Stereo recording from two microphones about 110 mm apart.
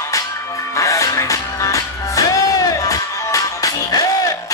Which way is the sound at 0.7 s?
30° left (ahead or behind).